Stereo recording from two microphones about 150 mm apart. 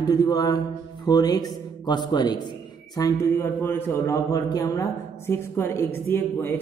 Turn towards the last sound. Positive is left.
turn(degrees=15)  # may be behind; listen again after turning